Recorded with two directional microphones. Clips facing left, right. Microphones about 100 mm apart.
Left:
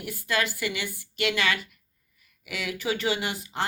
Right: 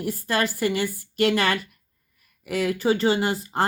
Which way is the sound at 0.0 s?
40° right (ahead or behind).